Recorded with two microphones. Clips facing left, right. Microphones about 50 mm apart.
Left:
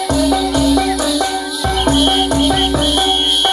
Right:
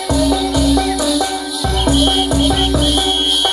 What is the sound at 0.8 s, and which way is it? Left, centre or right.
Music, left.